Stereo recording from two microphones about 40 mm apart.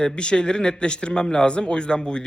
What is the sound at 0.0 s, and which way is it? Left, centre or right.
Speech, left.